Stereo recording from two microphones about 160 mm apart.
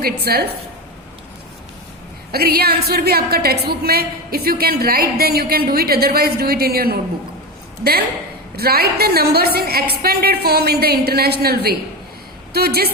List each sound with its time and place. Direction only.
0.0 s a woman's voice: 75° right (ahead or behind)
2.3 s a woman's voice: 75° right (ahead or behind)
8.5 s a woman's voice: 75° right (ahead or behind)